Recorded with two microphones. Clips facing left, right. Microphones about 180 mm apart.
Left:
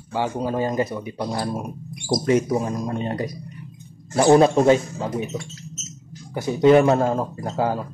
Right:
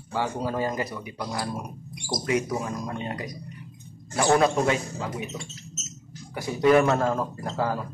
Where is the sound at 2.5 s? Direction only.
25° left (ahead or behind).